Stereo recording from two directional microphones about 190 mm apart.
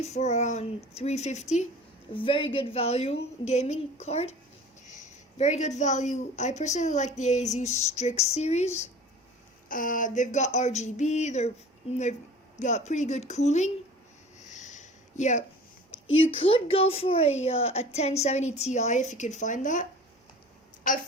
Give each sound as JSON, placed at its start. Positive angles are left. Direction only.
{"t": 0.0, "sound": "a woman's voice", "side_deg": 35}
{"t": 9.6, "sound": "a woman's voice", "side_deg": 45}
{"t": 12.5, "sound": "a woman's voice", "side_deg": 40}
{"t": 14.5, "sound": "a sound", "side_deg": 40}
{"t": 16.0, "sound": "a woman's voice", "side_deg": 90}
{"t": 16.3, "sound": "a woman's voice", "side_deg": 30}